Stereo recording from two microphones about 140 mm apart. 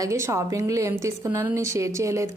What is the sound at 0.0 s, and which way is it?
A woman's voice, 20° right (ahead or behind).